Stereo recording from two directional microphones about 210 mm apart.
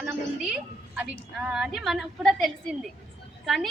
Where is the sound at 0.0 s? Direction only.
5° right (ahead or behind).